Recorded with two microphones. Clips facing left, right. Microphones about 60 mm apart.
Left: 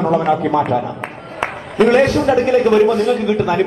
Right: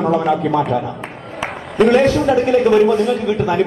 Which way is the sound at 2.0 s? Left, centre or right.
Left.